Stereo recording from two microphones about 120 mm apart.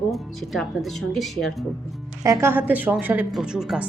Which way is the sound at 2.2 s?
25° right (ahead or behind).